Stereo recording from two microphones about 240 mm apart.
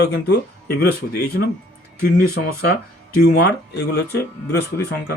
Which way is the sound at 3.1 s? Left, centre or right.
Left.